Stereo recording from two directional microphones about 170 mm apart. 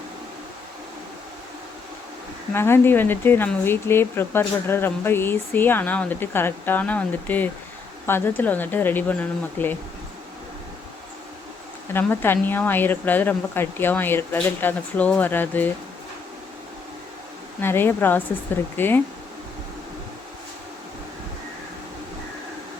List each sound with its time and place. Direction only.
2.5 s speech: 15° left (ahead or behind)
11.9 s speech: 10° left (ahead or behind)
17.6 s speech: 10° left (ahead or behind)